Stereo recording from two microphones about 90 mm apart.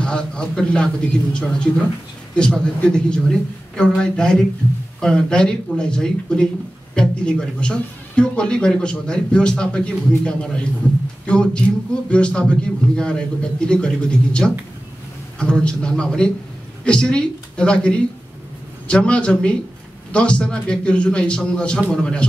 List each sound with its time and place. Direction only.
0.0 s a man's voice: 10° left (ahead or behind)